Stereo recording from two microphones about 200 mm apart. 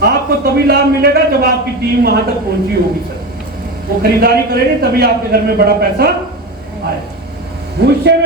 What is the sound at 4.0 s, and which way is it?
A man's voice, 50° right (ahead or behind).